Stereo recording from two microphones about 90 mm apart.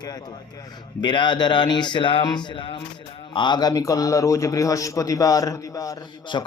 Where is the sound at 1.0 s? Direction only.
60° left (ahead or behind).